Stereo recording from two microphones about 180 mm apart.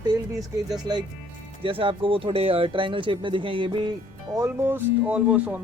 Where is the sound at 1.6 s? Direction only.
30° right (ahead or behind).